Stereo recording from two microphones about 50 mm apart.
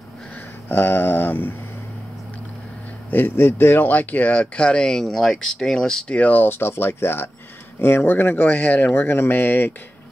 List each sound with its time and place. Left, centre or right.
0.7 s speech: left
3.1 s speech: left
4.9 s speech: centre
6.0 s speech: left